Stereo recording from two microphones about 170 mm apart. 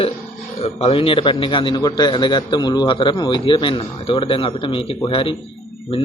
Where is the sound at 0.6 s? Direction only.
35° left (ahead or behind).